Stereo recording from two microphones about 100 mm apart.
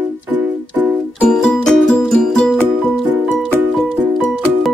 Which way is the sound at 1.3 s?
5° left (ahead or behind).